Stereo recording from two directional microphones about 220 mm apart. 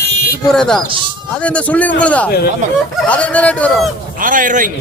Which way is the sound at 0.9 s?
20° right (ahead or behind).